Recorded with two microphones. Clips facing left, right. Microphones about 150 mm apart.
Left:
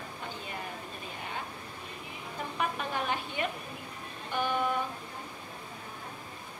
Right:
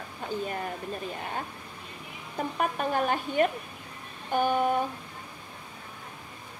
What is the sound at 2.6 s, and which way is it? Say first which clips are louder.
A woman's voice: right 5 dB; 45° right (ahead or behind).